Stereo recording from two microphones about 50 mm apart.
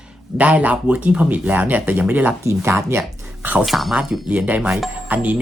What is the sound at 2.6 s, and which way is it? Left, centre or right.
Speech, right.